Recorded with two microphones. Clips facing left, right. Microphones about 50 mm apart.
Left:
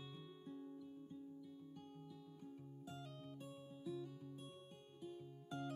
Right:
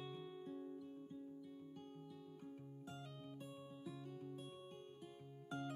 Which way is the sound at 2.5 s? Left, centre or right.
Right.